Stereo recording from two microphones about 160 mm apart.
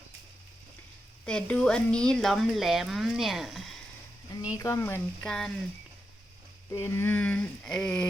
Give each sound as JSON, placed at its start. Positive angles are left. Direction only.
{"t": 1.2, "sound": "speech", "side_deg": 5}
{"t": 4.5, "sound": "speech", "side_deg": 20}
{"t": 5.2, "sound": "speech", "side_deg": 5}
{"t": 6.7, "sound": "speech", "side_deg": 15}